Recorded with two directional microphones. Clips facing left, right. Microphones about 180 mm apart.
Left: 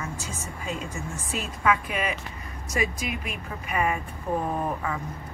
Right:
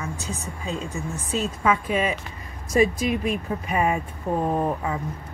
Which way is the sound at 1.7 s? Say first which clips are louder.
Right 2 dB; 25° right (ahead or behind).